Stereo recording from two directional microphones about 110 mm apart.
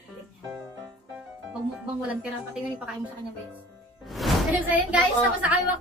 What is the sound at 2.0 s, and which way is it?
Speech, 10° right (ahead or behind).